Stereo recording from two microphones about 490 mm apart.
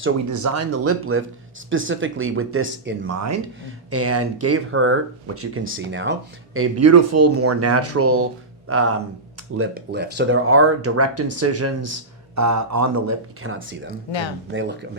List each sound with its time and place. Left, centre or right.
0.3 s speech: right
14.1 s speech: left
14.5 s speech: right